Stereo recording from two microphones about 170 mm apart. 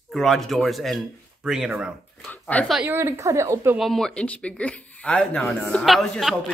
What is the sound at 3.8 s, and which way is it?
Speech, centre (ahead or behind).